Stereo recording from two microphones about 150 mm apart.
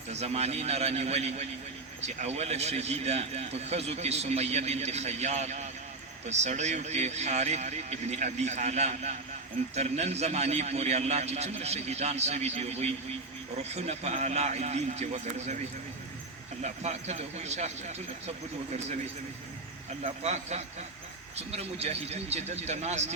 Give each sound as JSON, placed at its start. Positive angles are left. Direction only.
{"t": 0.1, "sound": "a man's voice", "side_deg": -45}
{"t": 16.6, "sound": "a man's voice", "side_deg": -50}
{"t": 20.2, "sound": "a man's voice", "side_deg": -45}